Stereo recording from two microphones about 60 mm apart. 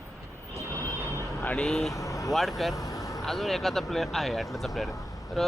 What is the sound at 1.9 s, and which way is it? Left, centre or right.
Vehicle, left.